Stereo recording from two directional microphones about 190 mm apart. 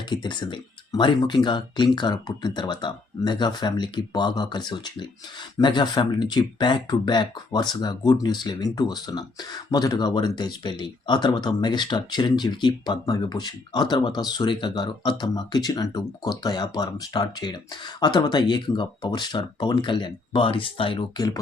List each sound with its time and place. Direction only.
0.1 s speech: 25° left (ahead or behind)